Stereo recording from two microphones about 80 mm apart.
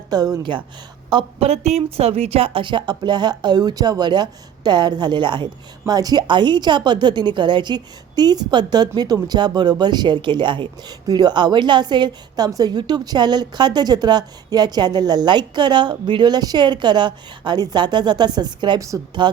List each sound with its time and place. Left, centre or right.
0.1 s speech: right
1.1 s a woman's voice: right
2.5 s a woman's voice: right
5.9 s a woman's voice: right
6.2 s a woman's voice: right
12.5 s a woman's voice: right